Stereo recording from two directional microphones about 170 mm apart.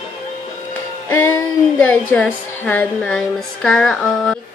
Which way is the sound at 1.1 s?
15° left (ahead or behind).